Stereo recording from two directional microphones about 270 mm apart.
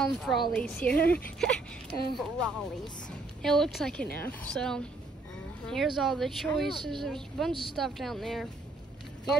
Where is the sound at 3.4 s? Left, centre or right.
Centre.